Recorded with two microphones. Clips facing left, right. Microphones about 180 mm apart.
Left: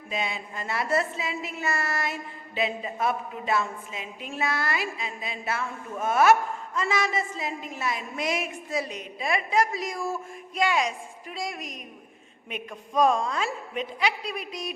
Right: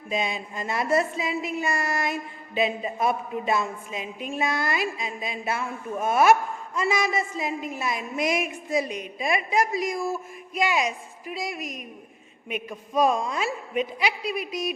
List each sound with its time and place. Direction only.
0.1 s a woman's voice: 15° right (ahead or behind)